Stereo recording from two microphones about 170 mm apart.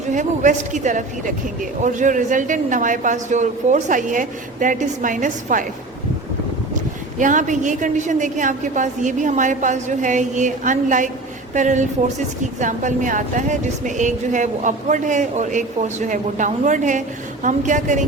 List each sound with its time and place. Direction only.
0.1 s speech: 45° right (ahead or behind)
7.2 s speech: 50° right (ahead or behind)